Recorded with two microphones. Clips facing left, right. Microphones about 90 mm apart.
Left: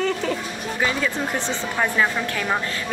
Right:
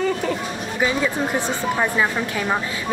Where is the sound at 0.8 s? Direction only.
10° right (ahead or behind).